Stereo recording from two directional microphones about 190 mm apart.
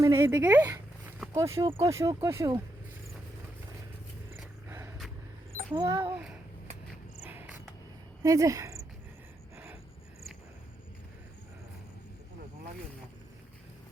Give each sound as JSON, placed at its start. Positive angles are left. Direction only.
{"t": 0.0, "sound": "speech", "side_deg": -15}
{"t": 5.7, "sound": "a child's voice", "side_deg": -20}
{"t": 7.2, "sound": "cricket", "side_deg": -5}
{"t": 8.2, "sound": "speech", "side_deg": -15}